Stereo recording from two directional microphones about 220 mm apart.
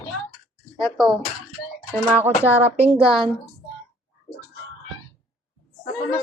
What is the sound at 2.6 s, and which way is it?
Speech, 30° right (ahead or behind).